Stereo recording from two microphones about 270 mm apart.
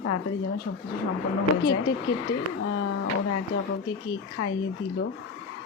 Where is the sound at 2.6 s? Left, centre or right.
Left.